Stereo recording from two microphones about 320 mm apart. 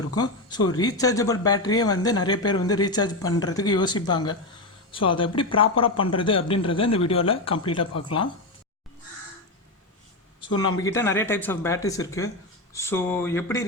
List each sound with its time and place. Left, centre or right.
0.2 s speech: centre
10.8 s speech: centre